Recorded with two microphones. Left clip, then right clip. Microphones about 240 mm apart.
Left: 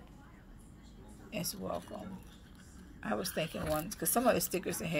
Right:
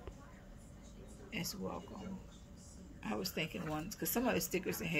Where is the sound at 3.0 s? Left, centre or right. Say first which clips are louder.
Left 4 dB; left.